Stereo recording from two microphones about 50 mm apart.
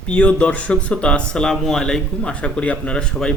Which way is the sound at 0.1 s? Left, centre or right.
Left.